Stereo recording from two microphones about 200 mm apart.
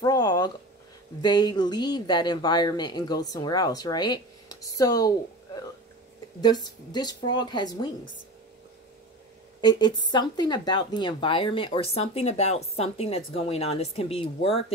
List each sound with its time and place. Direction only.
0.0 s a sound: 20° left (ahead or behind)
1.2 s speech: 20° left (ahead or behind)
6.4 s speech: 20° left (ahead or behind)
9.6 s speech: 20° left (ahead or behind)